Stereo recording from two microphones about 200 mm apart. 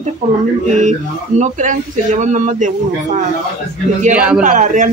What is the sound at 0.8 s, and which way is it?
A woman's voice, 35° right (ahead or behind).